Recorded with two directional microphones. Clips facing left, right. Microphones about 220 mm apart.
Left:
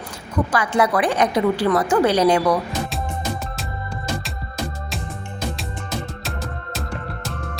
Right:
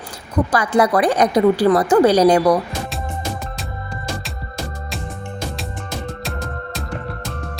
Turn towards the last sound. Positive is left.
turn(degrees=0)  # may be behind; listen again after turning